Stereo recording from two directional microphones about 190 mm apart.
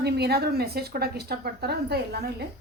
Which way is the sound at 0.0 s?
55° right (ahead or behind).